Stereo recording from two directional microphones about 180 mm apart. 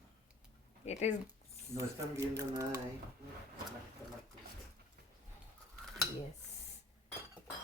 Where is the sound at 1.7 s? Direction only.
15° right (ahead or behind).